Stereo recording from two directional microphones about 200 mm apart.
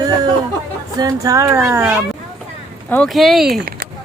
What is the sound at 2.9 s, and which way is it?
Speech, centre (ahead or behind).